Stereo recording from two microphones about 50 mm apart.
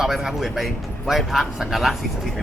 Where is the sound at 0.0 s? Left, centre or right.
Centre.